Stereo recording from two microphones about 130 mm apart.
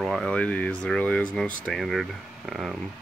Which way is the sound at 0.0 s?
Centre (ahead or behind).